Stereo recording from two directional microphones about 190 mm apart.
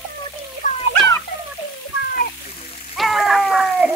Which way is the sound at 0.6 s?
40° left (ahead or behind).